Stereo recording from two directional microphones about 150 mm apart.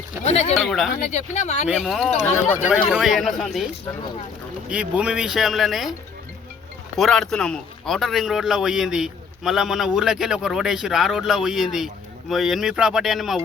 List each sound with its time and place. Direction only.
0.3 s speech: 45° left (ahead or behind)
0.5 s a man's voice: centre (ahead or behind)
0.9 s speech: 50° left (ahead or behind)
1.6 s a man's voice: centre (ahead or behind)
4.7 s a man's voice: 5° right (ahead or behind)
6.9 s a man's voice: centre (ahead or behind)